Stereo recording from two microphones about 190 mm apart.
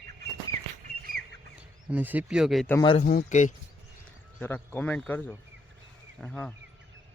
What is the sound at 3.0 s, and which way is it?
Speech, 45° left (ahead or behind).